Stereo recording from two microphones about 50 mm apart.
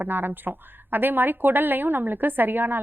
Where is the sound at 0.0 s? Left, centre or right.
Right.